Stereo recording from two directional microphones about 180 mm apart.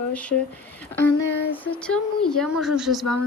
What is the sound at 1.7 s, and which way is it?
A woman's voice, 5° left (ahead or behind).